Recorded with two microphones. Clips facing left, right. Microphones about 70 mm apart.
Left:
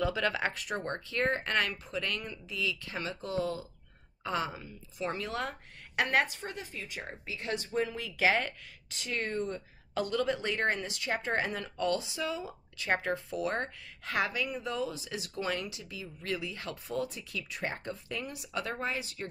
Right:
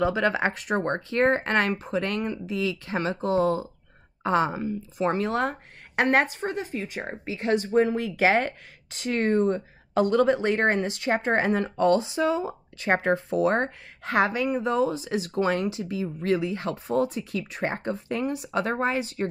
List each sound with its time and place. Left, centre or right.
0.0 s speech: right